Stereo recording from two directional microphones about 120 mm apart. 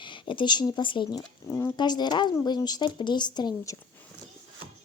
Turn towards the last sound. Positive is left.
turn(degrees=35)  # may be behind; listen again after turning